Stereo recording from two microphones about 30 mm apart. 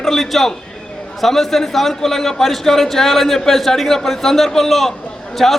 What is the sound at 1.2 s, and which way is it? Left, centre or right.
A man's voice, centre.